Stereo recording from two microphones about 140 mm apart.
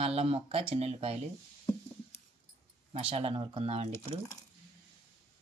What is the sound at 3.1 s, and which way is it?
Speech, 40° right (ahead or behind).